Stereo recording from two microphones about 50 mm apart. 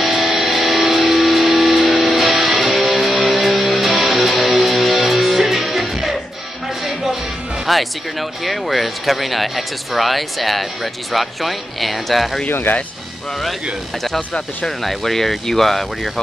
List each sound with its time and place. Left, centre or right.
0.0 s music: centre
7.6 s speech: centre
12.4 s speech: left
14.8 s speech: centre